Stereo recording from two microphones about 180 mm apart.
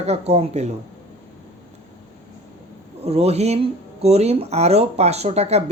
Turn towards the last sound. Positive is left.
turn(degrees=-35)  # may be behind; listen again after turning